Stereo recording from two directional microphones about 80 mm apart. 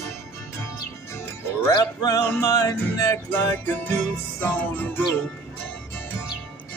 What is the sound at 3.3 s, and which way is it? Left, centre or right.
Music, left.